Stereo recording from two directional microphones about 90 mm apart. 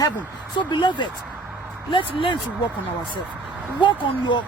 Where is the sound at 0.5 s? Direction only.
60° left (ahead or behind).